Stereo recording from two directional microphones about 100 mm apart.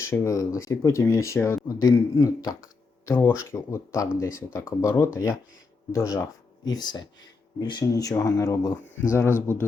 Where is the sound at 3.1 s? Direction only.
25° left (ahead or behind).